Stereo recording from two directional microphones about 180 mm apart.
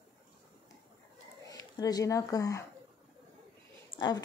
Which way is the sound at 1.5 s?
20° left (ahead or behind).